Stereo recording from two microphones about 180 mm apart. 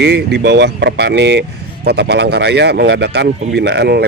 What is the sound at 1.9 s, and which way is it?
Speech, 65° right (ahead or behind).